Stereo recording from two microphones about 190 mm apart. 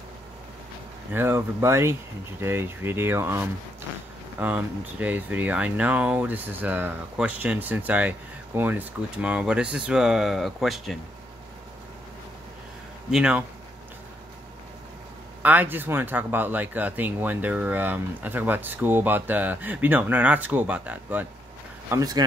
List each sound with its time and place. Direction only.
1.1 s speech: 15° right (ahead or behind)
13.1 s speech: 5° right (ahead or behind)
15.4 s speech: 10° right (ahead or behind)
21.9 s speech: 20° right (ahead or behind)